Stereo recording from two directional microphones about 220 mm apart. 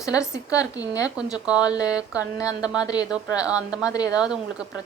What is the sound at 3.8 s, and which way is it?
Speech, 15° left (ahead or behind).